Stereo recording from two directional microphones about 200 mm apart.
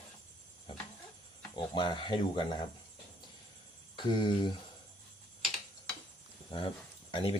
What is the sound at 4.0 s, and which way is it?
Speech, 25° left (ahead or behind).